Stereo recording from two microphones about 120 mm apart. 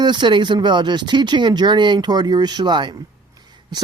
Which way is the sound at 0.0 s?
40° right (ahead or behind).